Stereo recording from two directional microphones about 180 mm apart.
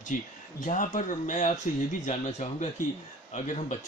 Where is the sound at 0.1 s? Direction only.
45° left (ahead or behind).